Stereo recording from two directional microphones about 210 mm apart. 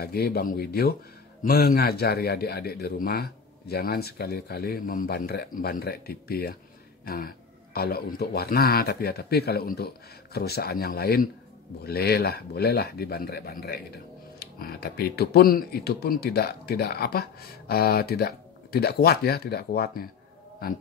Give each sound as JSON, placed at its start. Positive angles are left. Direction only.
{"t": 0.0, "sound": "speech", "side_deg": 45}